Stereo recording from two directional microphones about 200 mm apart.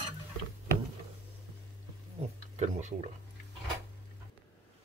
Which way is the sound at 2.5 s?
35° right (ahead or behind).